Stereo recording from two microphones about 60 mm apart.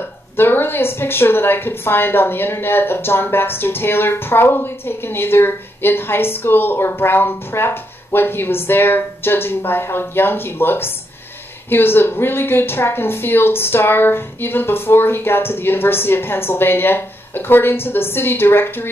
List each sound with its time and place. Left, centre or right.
0.4 s speech: left